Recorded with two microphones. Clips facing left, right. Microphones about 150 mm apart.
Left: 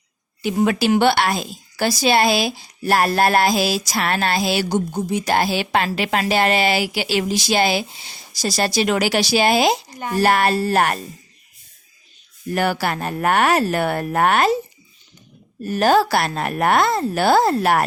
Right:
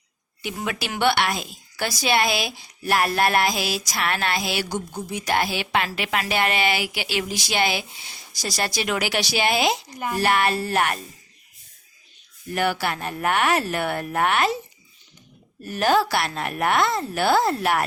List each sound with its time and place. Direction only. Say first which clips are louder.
0.4 s speech: left 11 dB; 35° left (ahead or behind)
12.5 s speech: left 3 dB; 40° left (ahead or behind)
15.6 s speech: left 4 dB; 40° left (ahead or behind)